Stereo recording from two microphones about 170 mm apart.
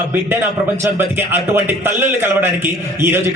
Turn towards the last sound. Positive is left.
turn(degrees=-15)  # may be behind; listen again after turning